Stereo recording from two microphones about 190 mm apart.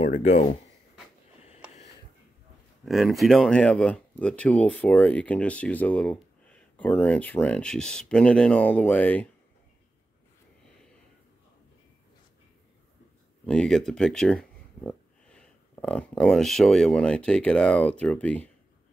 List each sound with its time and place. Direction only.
0.0 s speech: 35° left (ahead or behind)
1.4 s a sound: 35° left (ahead or behind)
2.8 s speech: centre (ahead or behind)
13.5 s speech: 5° left (ahead or behind)